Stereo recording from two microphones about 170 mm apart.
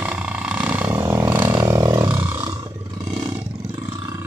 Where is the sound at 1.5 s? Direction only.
20° right (ahead or behind).